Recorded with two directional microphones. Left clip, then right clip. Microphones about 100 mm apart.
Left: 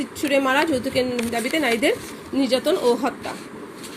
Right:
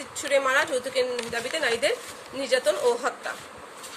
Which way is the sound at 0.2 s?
40° left (ahead or behind).